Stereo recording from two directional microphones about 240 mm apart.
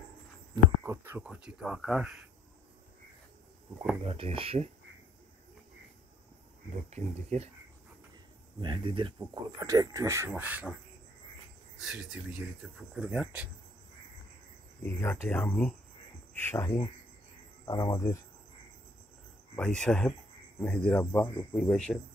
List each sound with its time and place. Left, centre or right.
0.8 s a sound: centre
4.0 s speech: right
6.7 s speech: right
8.5 s speech: centre
11.8 s speech: centre
14.8 s speech: centre
19.5 s speech: centre